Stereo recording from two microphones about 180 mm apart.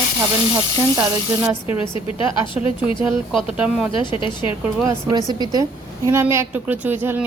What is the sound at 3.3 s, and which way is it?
Speech, centre (ahead or behind).